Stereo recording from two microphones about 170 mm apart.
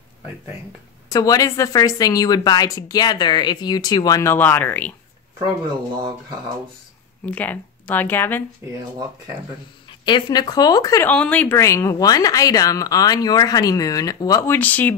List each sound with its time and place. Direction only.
1.1 s speech: 20° left (ahead or behind)
7.2 s speech: 10° left (ahead or behind)
9.8 s speech: 25° left (ahead or behind)
11.1 s speech: 10° left (ahead or behind)